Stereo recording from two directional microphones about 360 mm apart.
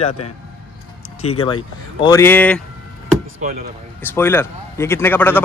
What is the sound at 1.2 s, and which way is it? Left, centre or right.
Speech, centre.